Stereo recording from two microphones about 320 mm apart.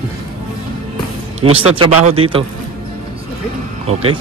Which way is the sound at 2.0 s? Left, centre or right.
Centre.